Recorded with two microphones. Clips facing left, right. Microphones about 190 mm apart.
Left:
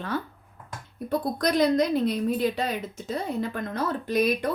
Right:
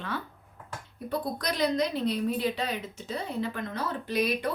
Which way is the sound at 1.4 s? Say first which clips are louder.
Left 6 dB; 50° left (ahead or behind).